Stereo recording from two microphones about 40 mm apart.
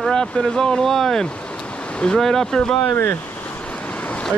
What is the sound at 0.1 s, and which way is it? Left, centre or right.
Speech, centre.